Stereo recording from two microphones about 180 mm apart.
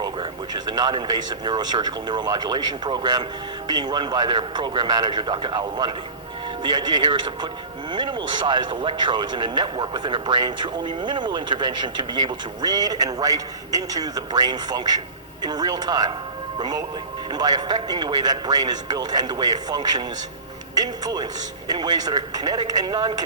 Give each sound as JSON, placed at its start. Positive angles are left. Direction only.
{"t": 0.0, "sound": "speech", "side_deg": -25}